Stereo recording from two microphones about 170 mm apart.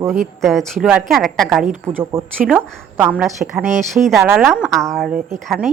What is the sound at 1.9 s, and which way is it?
Speech, 10° right (ahead or behind).